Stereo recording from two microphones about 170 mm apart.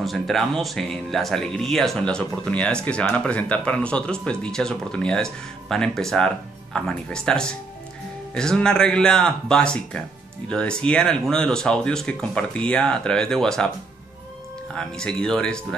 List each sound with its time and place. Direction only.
0.0 s speech: centre (ahead or behind)
14.7 s speech: 5° left (ahead or behind)